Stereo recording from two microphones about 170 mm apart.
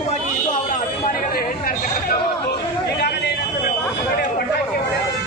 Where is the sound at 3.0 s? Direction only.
70° left (ahead or behind).